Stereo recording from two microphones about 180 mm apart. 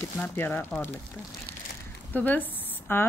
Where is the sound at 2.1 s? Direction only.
10° left (ahead or behind).